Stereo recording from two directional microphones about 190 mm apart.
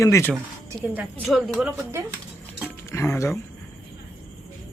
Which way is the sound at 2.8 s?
15° left (ahead or behind).